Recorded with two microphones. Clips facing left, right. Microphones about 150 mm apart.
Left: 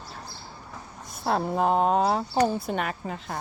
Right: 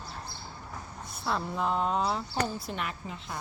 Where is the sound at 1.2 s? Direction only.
50° left (ahead or behind).